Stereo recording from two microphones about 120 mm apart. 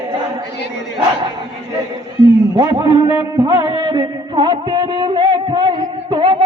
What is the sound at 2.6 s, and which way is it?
Speech, 35° right (ahead or behind).